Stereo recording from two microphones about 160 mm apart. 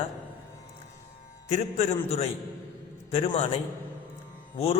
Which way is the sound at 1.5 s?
40° left (ahead or behind).